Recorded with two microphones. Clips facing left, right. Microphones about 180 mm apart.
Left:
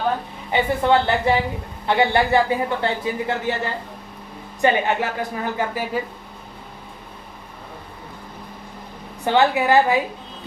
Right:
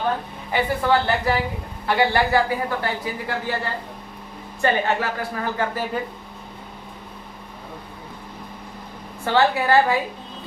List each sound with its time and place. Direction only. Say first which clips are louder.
0.5 s speech: left 2 dB; 25° left (ahead or behind)
4.6 s a woman's voice: left 2 dB; 20° left (ahead or behind)
9.2 s a woman's voice: left 2 dB; 15° left (ahead or behind)